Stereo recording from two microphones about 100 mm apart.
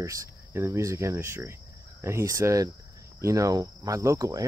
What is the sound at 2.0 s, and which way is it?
Speech, 25° right (ahead or behind).